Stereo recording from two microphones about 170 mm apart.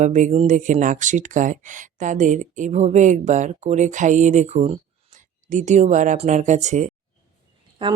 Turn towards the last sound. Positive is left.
turn(degrees=-30)  # may be behind; listen again after turning